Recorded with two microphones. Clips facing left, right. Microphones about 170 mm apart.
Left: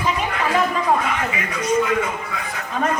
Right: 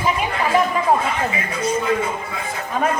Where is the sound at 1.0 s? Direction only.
30° right (ahead or behind).